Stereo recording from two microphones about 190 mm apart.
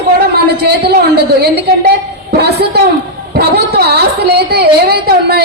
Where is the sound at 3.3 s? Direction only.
55° right (ahead or behind).